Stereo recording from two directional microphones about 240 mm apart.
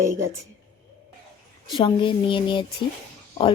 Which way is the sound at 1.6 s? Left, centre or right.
Left.